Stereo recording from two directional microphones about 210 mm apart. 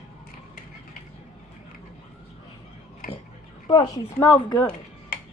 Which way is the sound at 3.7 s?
20° left (ahead or behind).